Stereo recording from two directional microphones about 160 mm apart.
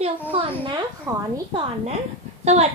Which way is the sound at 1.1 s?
20° right (ahead or behind).